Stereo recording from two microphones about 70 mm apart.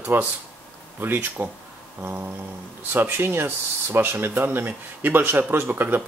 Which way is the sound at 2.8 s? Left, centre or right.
Right.